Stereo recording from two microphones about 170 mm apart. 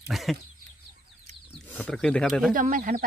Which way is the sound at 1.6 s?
10° left (ahead or behind).